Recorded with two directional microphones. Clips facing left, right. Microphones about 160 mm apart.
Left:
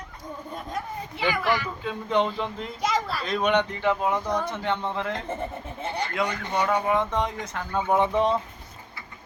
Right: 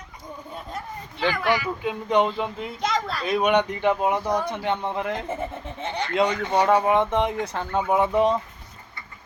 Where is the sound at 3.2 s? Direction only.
10° right (ahead or behind).